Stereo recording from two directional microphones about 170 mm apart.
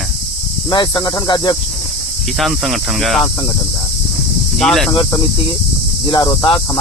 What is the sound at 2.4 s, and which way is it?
Speech, centre (ahead or behind).